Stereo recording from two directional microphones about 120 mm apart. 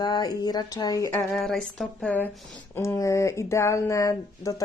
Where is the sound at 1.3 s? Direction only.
Centre (ahead or behind).